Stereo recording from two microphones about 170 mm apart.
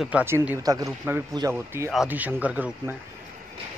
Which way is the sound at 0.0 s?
10° right (ahead or behind).